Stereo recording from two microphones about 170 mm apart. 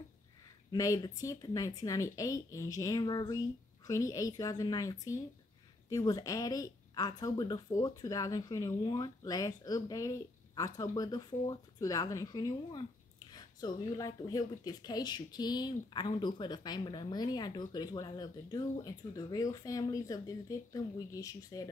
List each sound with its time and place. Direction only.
0.7 s speech: 20° left (ahead or behind)